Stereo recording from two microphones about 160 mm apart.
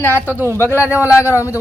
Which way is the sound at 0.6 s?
15° left (ahead or behind).